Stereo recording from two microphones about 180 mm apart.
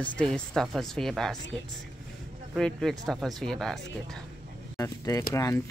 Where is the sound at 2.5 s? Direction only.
Centre (ahead or behind).